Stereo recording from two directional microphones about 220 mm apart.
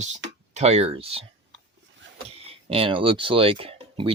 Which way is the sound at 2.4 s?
25° right (ahead or behind).